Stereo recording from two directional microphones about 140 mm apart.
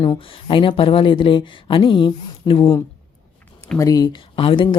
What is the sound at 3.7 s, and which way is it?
Speech, 25° left (ahead or behind).